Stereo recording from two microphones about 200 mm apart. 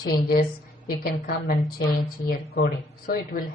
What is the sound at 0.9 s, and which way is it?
A woman's voice, 50° left (ahead or behind).